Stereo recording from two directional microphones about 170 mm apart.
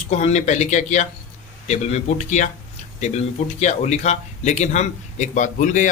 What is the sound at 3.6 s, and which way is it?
Speech, 45° left (ahead or behind).